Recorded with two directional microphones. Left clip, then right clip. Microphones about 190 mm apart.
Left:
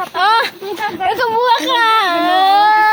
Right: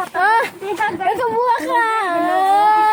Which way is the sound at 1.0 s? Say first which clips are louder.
Left 6 dB; 10° right (ahead or behind).